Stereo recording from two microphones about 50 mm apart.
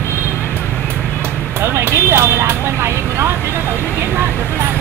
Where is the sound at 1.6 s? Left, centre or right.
Right.